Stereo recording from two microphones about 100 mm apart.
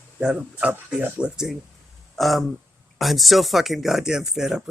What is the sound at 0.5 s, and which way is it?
Speech, 20° right (ahead or behind).